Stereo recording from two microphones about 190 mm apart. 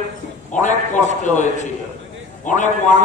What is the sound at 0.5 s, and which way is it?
A man's voice, 40° left (ahead or behind).